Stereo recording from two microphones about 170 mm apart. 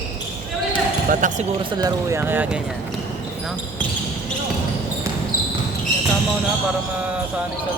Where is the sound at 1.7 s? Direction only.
20° right (ahead or behind).